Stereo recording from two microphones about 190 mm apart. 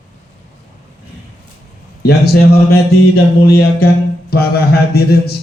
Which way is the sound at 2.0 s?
60° left (ahead or behind).